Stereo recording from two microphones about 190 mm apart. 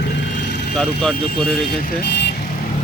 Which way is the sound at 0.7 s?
5° left (ahead or behind).